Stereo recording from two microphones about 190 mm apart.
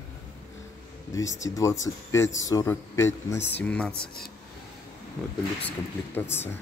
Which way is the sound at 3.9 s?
55° left (ahead or behind).